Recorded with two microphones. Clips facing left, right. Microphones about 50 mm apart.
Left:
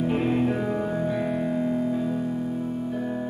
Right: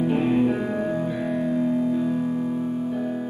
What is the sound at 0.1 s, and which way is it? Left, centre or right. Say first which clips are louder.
Music: right 3 dB; centre.